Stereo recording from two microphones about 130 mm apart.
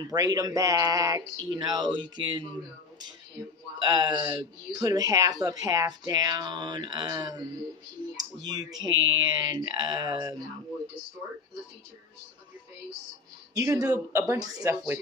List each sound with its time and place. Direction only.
0.0 s speech: 30° right (ahead or behind)
3.8 s speech: 30° right (ahead or behind)
8.5 s speech: 30° right (ahead or behind)
13.6 s speech: 20° right (ahead or behind)